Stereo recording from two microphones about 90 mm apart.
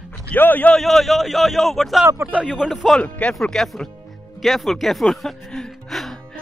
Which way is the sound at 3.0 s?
15° left (ahead or behind).